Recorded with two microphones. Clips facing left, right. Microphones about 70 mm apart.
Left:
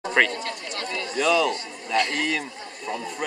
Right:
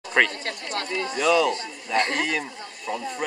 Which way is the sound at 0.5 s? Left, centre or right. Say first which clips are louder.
Right 2 dB; right.